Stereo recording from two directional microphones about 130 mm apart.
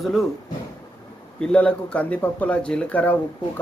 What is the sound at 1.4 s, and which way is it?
Speech, 10° left (ahead or behind).